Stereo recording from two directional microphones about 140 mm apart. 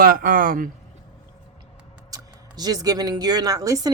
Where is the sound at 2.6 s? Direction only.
25° right (ahead or behind).